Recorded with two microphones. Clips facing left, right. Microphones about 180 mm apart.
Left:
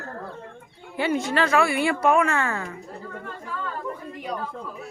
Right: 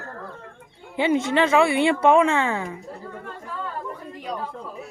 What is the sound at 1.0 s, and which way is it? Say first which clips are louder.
A woman's voice: right 3 dB; 20° right (ahead or behind).